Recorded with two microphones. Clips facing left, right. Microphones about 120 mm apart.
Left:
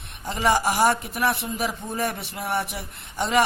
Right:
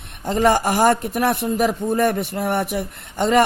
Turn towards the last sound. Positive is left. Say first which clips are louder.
# right 5 dB
turn(degrees=-50)  # may be behind; listen again after turning